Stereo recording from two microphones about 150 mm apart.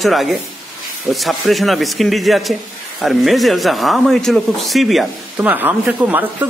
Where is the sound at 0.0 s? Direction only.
Centre (ahead or behind).